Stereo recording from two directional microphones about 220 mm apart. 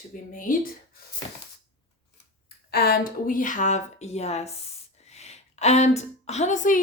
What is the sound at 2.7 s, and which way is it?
A woman's voice, 45° left (ahead or behind).